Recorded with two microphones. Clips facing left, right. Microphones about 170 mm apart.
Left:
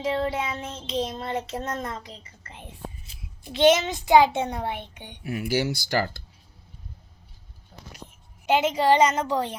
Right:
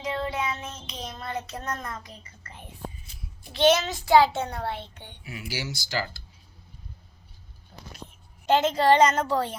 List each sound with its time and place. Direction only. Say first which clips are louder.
0.0 s child singing: left 3 dB; 30° left (ahead or behind)
3.5 s a child's voice: left 2 dB; 20° left (ahead or behind)
5.2 s speech: left 10 dB; 55° left (ahead or behind)
8.4 s a woman's voice: even; 10° left (ahead or behind)